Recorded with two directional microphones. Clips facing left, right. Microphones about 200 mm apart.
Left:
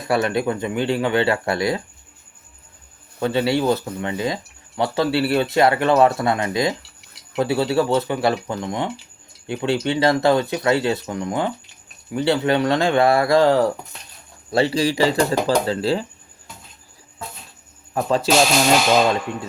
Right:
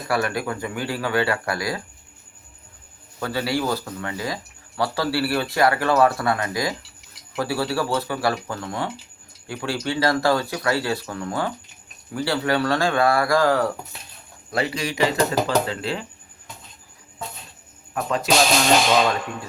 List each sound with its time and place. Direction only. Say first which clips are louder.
0.1 s speech: left 4 dB; 25° left (ahead or behind)
3.2 s speech: left 5 dB; 25° left (ahead or behind)
17.9 s speech: left 5 dB; 30° left (ahead or behind)